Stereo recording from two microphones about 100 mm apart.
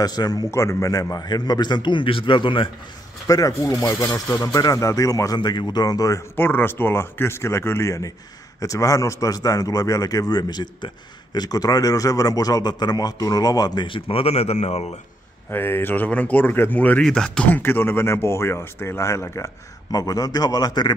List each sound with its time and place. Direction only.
0.0 s a man's voice: 40° left (ahead or behind)
0.5 s a man's voice: 30° left (ahead or behind); by 2.7 s 55° left (ahead or behind)
3.3 s a man's voice: 35° left (ahead or behind)
4.4 s a man's voice: 40° left (ahead or behind)
6.3 s a man's voice: 20° left (ahead or behind); by 13.8 s 40° left (ahead or behind)
13.8 s speech: 65° left (ahead or behind); by 15.0 s 90° left
15.5 s speech: 20° left (ahead or behind); by 17.5 s 5° left (ahead or behind)
17.5 s speech: 20° left (ahead or behind)
19.9 s a man's voice: 40° left (ahead or behind)